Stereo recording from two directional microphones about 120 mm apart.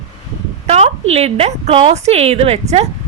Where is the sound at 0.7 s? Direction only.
60° right (ahead or behind).